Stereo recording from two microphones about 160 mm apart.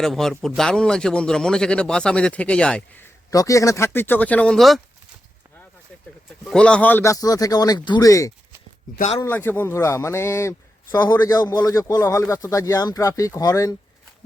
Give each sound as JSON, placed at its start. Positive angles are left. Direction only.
{"t": 0.0, "sound": "a man's voice", "side_deg": 5}
{"t": 3.2, "sound": "speech", "side_deg": 20}
{"t": 6.4, "sound": "speech", "side_deg": 5}